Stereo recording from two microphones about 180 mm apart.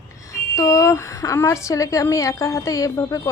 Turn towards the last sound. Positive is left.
turn(degrees=20)  # may be behind; listen again after turning